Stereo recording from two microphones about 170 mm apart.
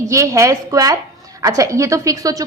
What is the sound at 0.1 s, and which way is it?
A woman's voice, 20° right (ahead or behind).